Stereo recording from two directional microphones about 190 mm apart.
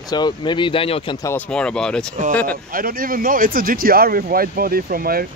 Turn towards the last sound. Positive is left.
turn(degrees=-50)  # may be behind; listen again after turning